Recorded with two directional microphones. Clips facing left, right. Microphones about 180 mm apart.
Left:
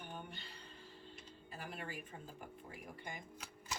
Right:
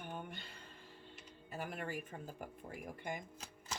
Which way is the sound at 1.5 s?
50° right (ahead or behind).